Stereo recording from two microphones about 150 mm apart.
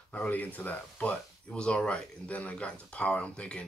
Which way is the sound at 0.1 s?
10° left (ahead or behind).